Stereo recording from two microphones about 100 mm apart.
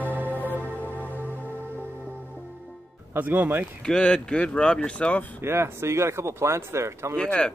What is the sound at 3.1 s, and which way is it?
Speech, 15° right (ahead or behind).